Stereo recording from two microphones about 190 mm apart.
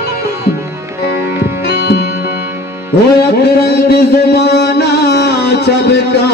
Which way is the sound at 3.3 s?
55° left (ahead or behind).